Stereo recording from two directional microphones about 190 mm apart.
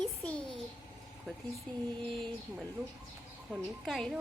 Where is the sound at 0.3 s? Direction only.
5° left (ahead or behind).